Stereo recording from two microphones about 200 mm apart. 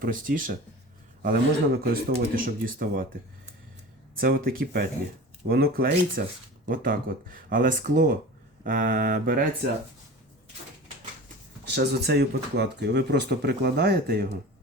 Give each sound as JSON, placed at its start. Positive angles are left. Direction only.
{"t": 0.0, "sound": "speech", "side_deg": -45}
{"t": 4.2, "sound": "speech", "side_deg": -45}
{"t": 8.6, "sound": "mantra", "side_deg": -40}
{"t": 11.6, "sound": "speech", "side_deg": -55}